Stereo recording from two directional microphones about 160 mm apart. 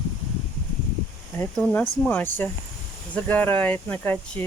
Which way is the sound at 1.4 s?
10° left (ahead or behind).